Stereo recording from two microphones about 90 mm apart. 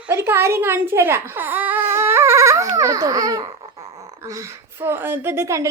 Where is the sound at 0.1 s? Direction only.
30° right (ahead or behind).